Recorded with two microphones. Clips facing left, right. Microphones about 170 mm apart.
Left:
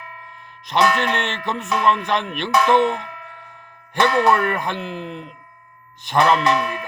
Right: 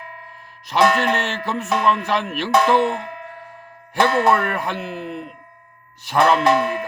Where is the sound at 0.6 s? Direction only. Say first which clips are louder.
Right 2 dB; 5° right (ahead or behind).